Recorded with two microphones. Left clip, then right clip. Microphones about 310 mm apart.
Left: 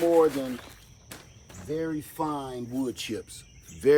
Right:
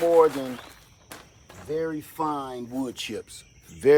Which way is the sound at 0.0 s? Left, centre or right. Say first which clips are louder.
Right 3 dB; centre.